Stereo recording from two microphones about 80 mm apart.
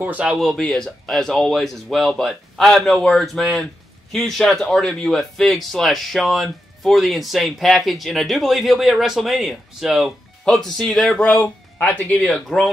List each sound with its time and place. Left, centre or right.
0.0 s speech: centre
0.4 s speech: centre